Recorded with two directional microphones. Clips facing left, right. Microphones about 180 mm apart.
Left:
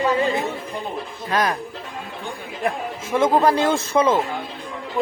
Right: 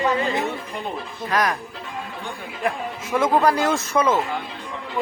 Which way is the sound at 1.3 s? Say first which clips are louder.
Left 1 dB; 25° left (ahead or behind).